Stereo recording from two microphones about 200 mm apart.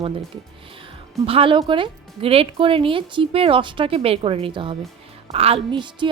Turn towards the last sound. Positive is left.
turn(degrees=-25)  # may be behind; listen again after turning